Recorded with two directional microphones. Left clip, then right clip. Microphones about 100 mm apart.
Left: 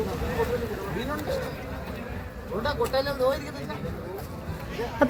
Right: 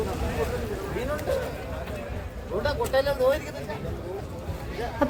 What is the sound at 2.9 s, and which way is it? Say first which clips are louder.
Speech: right 4 dB; 45° right (ahead or behind).